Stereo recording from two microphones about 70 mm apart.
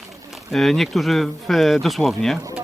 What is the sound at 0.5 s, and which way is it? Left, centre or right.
Speech, centre.